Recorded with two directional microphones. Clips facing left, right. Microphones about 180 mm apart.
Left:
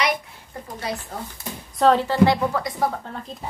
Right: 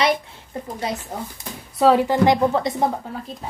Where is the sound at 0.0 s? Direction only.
30° right (ahead or behind).